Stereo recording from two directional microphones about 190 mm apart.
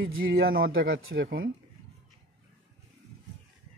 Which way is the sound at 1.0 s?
90° right.